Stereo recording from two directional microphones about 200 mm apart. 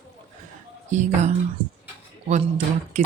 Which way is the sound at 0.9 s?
35° right (ahead or behind).